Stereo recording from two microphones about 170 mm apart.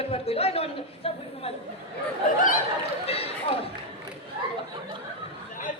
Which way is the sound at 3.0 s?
35° left (ahead or behind).